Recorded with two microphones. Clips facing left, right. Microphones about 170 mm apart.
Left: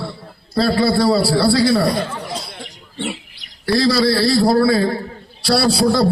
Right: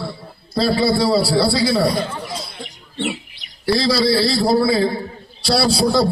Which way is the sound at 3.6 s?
15° right (ahead or behind).